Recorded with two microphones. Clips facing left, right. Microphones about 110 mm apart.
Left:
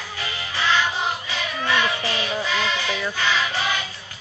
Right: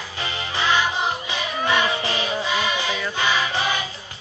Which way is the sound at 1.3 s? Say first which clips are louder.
Right 2 dB; 15° right (ahead or behind).